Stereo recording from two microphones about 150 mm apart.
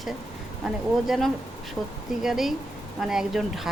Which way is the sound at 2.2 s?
Centre (ahead or behind).